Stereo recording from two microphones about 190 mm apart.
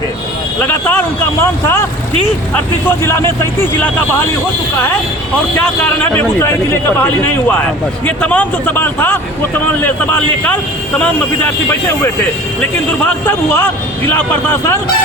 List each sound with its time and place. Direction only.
0.6 s a man's voice: 10° left (ahead or behind)
2.8 s a man's voice: 15° left (ahead or behind)
5.5 s a man's voice: 10° left (ahead or behind)